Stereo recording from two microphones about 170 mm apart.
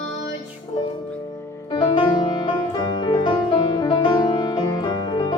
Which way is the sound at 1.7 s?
25° left (ahead or behind).